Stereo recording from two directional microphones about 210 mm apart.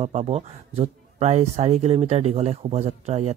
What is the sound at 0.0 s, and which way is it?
Speech, 30° right (ahead or behind).